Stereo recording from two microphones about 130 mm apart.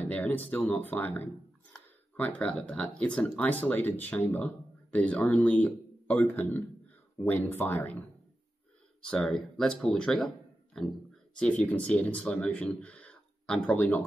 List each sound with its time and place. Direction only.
0.0 s speech: 10° left (ahead or behind)
9.1 s speech: 5° left (ahead or behind)